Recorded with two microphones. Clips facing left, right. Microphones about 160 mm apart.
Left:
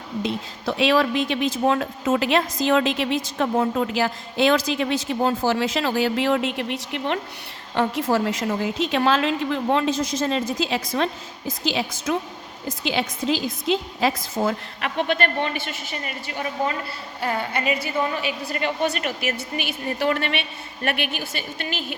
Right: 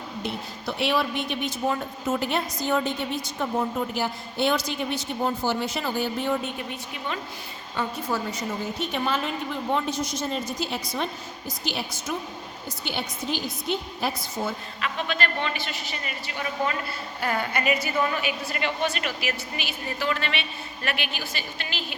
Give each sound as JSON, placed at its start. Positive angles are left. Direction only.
{"t": 0.2, "sound": "speech", "side_deg": 90}
{"t": 7.8, "sound": "a woman's voice", "side_deg": 90}
{"t": 17.2, "sound": "a woman's voice", "side_deg": 25}
{"t": 18.5, "sound": "a woman's voice", "side_deg": 45}